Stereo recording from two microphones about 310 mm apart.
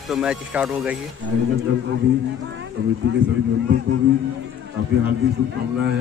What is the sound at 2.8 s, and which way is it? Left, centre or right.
Speech, right.